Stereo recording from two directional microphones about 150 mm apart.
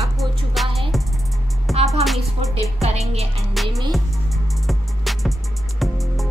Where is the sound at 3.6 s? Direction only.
Centre (ahead or behind).